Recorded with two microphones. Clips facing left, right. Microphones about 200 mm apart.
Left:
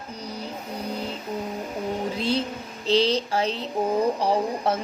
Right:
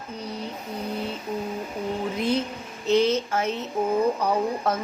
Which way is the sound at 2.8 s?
30° left (ahead or behind).